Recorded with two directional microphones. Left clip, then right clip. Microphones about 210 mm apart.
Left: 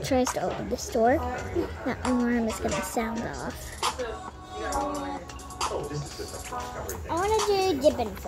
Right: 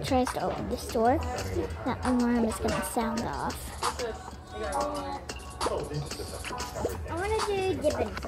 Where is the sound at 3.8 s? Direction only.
45° left (ahead or behind).